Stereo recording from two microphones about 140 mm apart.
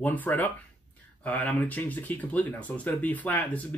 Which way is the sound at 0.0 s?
15° left (ahead or behind).